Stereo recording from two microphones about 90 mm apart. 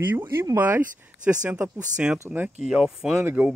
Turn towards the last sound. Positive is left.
turn(degrees=-25)  # may be behind; listen again after turning